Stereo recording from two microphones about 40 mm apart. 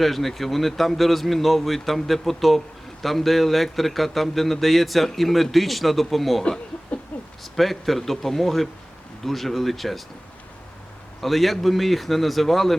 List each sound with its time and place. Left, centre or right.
0.0 s a man's voice: centre
7.1 s a sound: left
7.4 s a man's voice: centre
11.2 s a man's voice: centre